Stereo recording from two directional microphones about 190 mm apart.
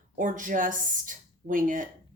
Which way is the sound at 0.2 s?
45° right (ahead or behind).